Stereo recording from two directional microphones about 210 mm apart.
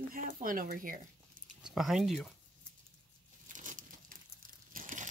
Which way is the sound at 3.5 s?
35° right (ahead or behind).